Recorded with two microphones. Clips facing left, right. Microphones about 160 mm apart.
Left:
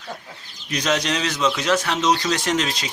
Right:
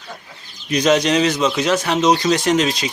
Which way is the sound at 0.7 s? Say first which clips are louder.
Right 7 dB; 15° right (ahead or behind).